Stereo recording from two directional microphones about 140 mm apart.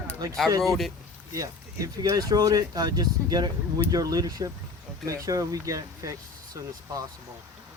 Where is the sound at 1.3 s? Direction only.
25° right (ahead or behind).